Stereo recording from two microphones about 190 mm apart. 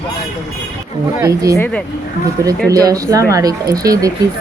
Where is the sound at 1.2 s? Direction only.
15° right (ahead or behind).